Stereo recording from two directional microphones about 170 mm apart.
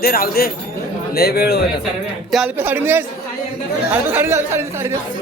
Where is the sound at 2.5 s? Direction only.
10° right (ahead or behind).